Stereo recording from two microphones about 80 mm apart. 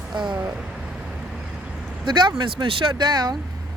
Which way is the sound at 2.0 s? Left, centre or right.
Right.